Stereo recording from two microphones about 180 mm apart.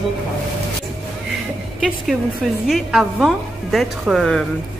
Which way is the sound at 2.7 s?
Centre (ahead or behind).